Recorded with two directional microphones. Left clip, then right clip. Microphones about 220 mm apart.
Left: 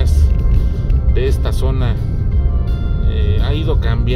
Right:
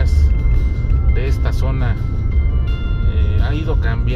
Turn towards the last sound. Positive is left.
turn(degrees=25)  # may be behind; listen again after turning